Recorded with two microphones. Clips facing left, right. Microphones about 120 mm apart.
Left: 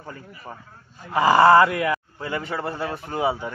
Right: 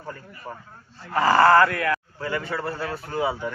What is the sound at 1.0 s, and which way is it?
A man's voice, 15° left (ahead or behind).